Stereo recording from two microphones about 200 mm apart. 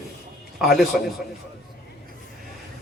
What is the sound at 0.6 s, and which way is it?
Speech, centre (ahead or behind).